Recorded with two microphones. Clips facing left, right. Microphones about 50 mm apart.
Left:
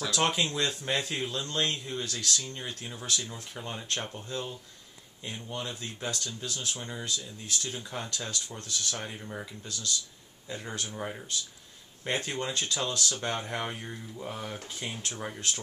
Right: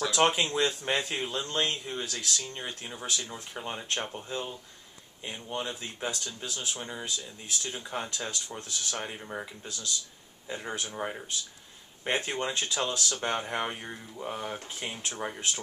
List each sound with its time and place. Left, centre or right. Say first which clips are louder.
0.0 s speech: right 3 dB; centre